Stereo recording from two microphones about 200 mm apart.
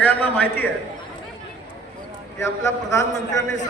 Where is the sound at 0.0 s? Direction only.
10° left (ahead or behind).